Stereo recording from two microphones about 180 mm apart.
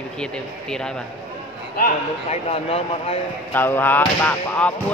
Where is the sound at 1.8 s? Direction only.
40° left (ahead or behind).